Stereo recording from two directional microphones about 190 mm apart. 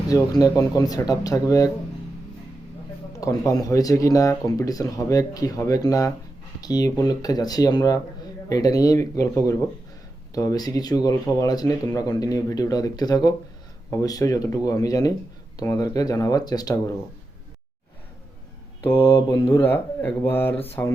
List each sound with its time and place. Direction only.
0.1 s speech: 20° left (ahead or behind)
3.2 s speech: 15° left (ahead or behind)
18.8 s speech: 15° left (ahead or behind)